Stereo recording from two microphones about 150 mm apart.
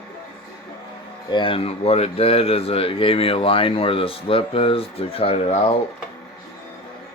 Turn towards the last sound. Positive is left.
turn(degrees=40)  # may be behind; listen again after turning